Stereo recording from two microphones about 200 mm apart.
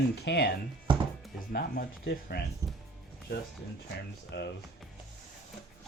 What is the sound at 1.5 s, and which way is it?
Speech, 50° left (ahead or behind).